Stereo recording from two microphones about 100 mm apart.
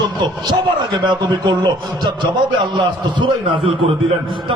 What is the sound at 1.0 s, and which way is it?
A man's voice, 45° right (ahead or behind).